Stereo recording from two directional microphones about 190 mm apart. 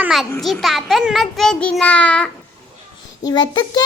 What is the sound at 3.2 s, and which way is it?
Speech, 20° left (ahead or behind).